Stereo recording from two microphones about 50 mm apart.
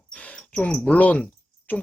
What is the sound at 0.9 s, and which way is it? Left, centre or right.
Speech, left.